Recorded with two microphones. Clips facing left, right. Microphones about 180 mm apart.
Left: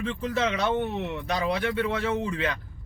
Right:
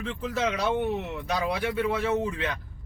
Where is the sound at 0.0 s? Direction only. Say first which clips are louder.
Left 2 dB; centre (ahead or behind).